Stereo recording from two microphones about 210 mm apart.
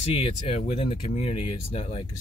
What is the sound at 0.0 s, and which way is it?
Speech, 25° left (ahead or behind).